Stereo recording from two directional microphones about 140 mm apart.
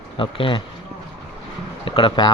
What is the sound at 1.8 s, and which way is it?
Speech, 40° left (ahead or behind).